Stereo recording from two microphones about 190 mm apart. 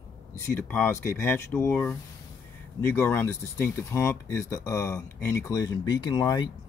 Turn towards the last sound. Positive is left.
turn(degrees=20)  # may be behind; listen again after turning